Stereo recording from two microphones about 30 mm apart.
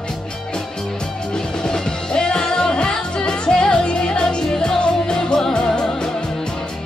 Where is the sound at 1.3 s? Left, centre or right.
Left.